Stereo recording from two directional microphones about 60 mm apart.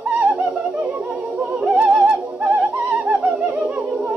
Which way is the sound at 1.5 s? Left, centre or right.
Centre.